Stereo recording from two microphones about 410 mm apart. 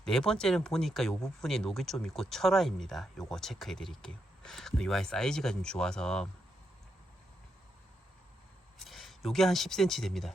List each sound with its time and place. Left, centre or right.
0.0 s speech: centre
8.8 s speech: centre